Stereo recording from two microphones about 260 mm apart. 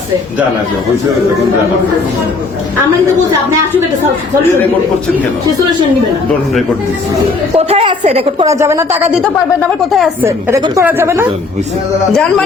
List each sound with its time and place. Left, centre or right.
7.5 s a woman's voice: right
10.2 s a woman's voice: centre